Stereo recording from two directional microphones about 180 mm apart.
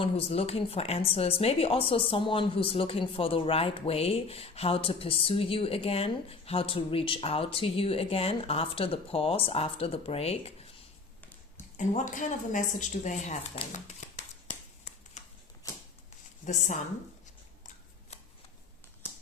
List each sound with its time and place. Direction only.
0.0 s speech: 35° left (ahead or behind)
11.8 s speech: 45° left (ahead or behind)
15.2 s typewriter: 40° left (ahead or behind)